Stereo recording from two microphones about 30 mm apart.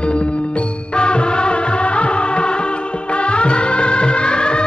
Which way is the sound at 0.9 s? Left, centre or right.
Left.